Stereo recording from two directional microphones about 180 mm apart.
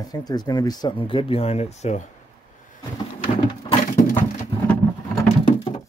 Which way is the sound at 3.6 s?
20° left (ahead or behind).